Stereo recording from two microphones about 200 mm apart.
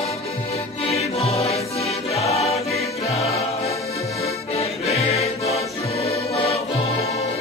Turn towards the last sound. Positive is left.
turn(degrees=30)  # may be behind; listen again after turning